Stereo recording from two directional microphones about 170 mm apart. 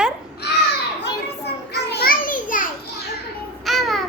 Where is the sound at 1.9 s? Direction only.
65° left (ahead or behind).